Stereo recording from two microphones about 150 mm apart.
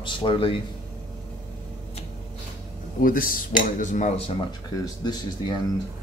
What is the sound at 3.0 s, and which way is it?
Cutlery, 70° left (ahead or behind).